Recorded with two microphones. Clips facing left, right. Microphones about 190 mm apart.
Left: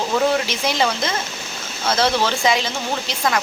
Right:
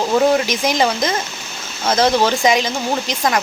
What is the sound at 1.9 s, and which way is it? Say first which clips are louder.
Speech: right 4 dB; 45° right (ahead or behind).